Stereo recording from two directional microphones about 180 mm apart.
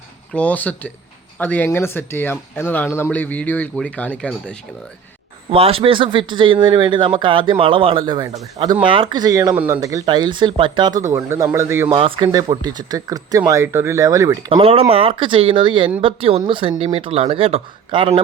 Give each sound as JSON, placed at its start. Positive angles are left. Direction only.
{"t": 0.3, "sound": "speech", "side_deg": 10}
{"t": 5.5, "sound": "speech", "side_deg": -30}
{"t": 9.6, "sound": "speech", "side_deg": -10}
{"t": 9.8, "sound": "speech", "side_deg": -20}
{"t": 11.9, "sound": "speech", "side_deg": -30}
{"t": 14.5, "sound": "speech", "side_deg": -30}